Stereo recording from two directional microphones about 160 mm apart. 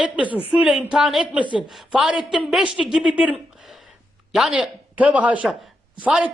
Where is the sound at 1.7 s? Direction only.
5° right (ahead or behind).